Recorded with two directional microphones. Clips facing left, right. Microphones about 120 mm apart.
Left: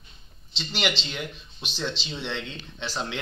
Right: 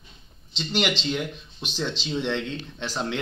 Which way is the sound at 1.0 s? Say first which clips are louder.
Right 9 dB; 45° right (ahead or behind).